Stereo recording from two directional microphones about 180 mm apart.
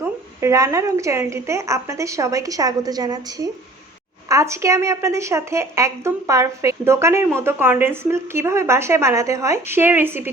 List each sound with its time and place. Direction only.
0.0 s a woman's voice: 15° right (ahead or behind)